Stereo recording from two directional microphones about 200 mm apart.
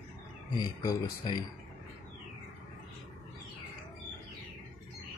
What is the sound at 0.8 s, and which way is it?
Speech, 15° left (ahead or behind).